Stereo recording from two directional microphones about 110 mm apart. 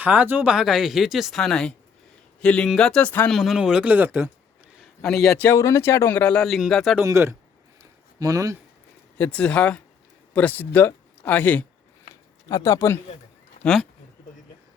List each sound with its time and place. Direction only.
0.0 s speech: 15° right (ahead or behind)
0.5 s speech: 5° right (ahead or behind); by 3.2 s 15° left (ahead or behind)
3.2 s speech: centre (ahead or behind); by 4.3 s 15° right (ahead or behind)
4.8 s a sound: 5° left (ahead or behind)
5.5 s speech: 25° left (ahead or behind); by 6.9 s centre (ahead or behind)
7.0 s speech: 25° right (ahead or behind)
7.8 s a sound: 30° right (ahead or behind)
9.1 s speech: 15° left (ahead or behind)
12.5 s speech: 30° left (ahead or behind)
13.6 s speech: 5° left (ahead or behind)